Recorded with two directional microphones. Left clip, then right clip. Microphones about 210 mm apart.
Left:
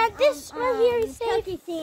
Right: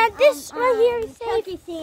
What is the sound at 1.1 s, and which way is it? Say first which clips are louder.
Speech: right 1 dB; 25° left (ahead or behind).